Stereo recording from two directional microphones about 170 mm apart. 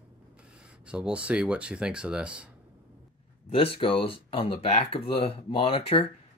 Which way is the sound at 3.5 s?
35° left (ahead or behind).